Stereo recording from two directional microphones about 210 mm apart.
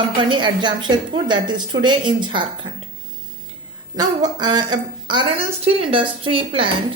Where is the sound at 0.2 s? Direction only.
20° right (ahead or behind).